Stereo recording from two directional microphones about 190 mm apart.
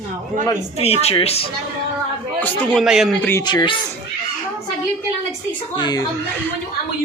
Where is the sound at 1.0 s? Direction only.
30° left (ahead or behind).